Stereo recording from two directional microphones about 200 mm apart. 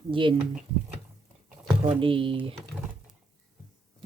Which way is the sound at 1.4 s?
10° right (ahead or behind).